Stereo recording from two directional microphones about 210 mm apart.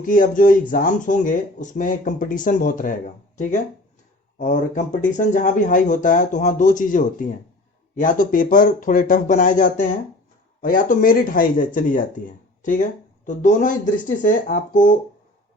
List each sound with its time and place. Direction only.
0.0 s speech: 40° left (ahead or behind)